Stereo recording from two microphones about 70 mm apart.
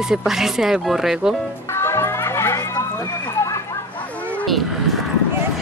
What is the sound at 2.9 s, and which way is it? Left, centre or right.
Run, left.